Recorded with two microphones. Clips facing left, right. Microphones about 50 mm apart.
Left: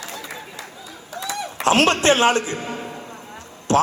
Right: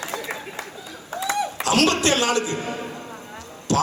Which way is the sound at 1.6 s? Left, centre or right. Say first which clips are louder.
Left 4 dB; left.